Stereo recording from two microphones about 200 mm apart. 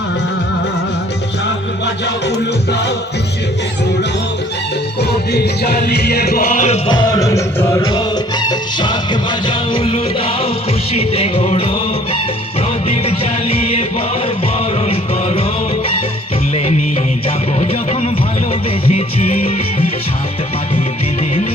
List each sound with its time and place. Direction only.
4.9 s music: 55° left (ahead or behind)
6.8 s music: 20° left (ahead or behind)
14.8 s music: 30° left (ahead or behind)
17.2 s music: 30° left (ahead or behind)